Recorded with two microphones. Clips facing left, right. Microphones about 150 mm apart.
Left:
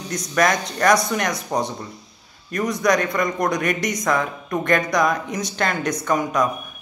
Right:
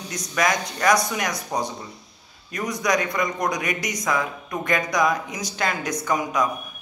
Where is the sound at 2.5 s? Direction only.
10° right (ahead or behind).